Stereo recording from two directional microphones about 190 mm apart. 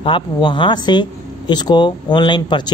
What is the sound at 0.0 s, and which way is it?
Speech, 25° left (ahead or behind).